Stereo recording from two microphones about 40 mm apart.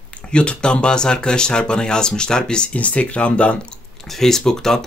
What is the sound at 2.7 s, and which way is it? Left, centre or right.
Speech, left.